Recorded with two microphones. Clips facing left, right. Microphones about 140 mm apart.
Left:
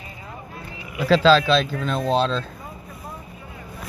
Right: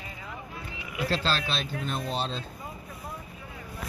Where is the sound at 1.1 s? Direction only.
90° left.